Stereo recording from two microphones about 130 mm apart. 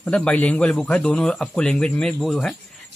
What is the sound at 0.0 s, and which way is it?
A man's voice, 10° left (ahead or behind).